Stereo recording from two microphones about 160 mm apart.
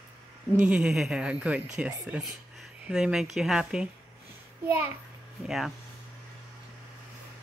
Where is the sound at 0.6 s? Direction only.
5° right (ahead or behind).